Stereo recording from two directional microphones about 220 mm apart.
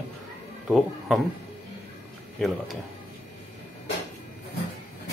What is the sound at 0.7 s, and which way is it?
Speech, centre (ahead or behind).